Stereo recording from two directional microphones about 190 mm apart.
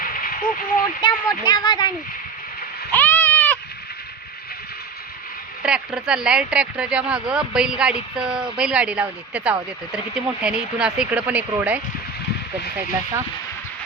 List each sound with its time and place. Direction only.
0.0 s a sound: 50° left (ahead or behind)
1.0 s speech: 25° left (ahead or behind)
2.9 s goat: 10° left (ahead or behind)
5.6 s speech: 5° right (ahead or behind)